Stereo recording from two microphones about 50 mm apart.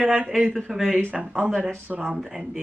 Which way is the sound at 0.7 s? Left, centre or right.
Centre.